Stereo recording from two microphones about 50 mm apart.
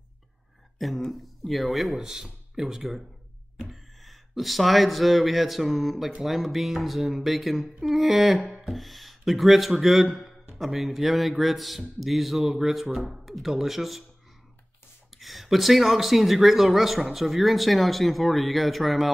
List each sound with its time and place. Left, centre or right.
0.7 s speech: centre
2.0 s speech: centre
15.1 s speech: centre